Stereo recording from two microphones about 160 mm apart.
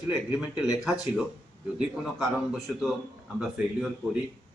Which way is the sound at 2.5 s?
Centre (ahead or behind).